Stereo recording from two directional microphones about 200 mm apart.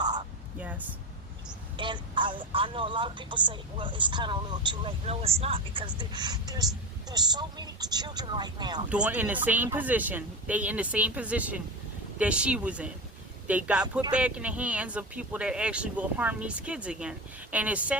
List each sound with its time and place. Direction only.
0.0 s whispering: 20° right (ahead or behind)
1.7 s speech: 25° right (ahead or behind)
8.9 s speech: 5° right (ahead or behind)